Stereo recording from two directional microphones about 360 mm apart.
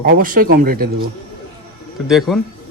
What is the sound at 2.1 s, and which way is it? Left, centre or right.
Speech, centre.